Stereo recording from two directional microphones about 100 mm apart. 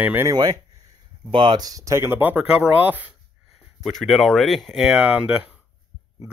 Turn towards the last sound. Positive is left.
turn(degrees=-15)  # may be behind; listen again after turning